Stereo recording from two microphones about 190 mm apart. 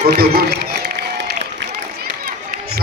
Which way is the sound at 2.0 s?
55° right (ahead or behind).